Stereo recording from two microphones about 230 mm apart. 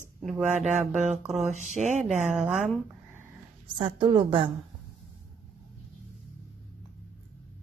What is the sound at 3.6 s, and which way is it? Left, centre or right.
Speech, right.